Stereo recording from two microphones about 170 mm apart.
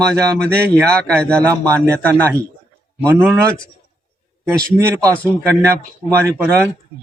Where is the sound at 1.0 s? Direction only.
5° left (ahead or behind).